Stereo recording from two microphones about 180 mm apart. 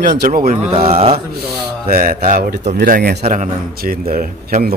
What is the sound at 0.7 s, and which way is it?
Speech, 30° right (ahead or behind).